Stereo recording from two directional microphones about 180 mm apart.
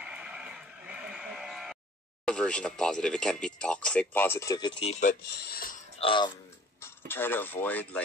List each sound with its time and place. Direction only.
0.0 s a sound: 5° right (ahead or behind)
2.2 s speech: 5° left (ahead or behind); by 5.1 s 35° left (ahead or behind)
5.3 s speech: 60° left (ahead or behind)
5.9 s speech: 30° left (ahead or behind)
6.8 s speech: 10° left (ahead or behind)